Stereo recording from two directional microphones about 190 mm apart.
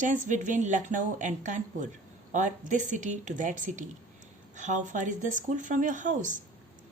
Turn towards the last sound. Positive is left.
turn(degrees=-40)  # may be behind; listen again after turning